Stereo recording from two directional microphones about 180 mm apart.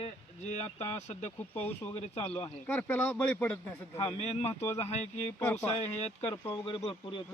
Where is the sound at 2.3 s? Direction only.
20° left (ahead or behind).